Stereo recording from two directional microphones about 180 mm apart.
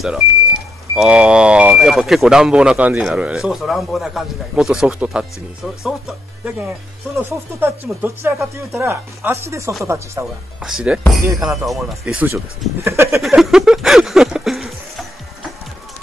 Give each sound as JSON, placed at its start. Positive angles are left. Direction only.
{"t": 0.9, "sound": "speech", "side_deg": -5}
{"t": 10.6, "sound": "speech", "side_deg": -5}
{"t": 13.1, "sound": "a sound", "side_deg": 0}